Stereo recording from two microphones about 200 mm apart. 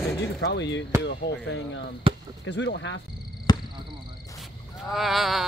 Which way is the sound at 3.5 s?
20° left (ahead or behind).